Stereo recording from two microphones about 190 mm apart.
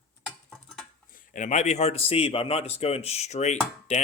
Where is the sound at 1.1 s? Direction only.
45° left (ahead or behind).